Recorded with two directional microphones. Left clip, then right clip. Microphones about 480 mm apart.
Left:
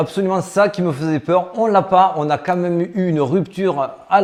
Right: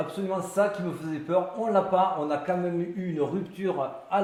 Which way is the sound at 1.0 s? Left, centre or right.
Left.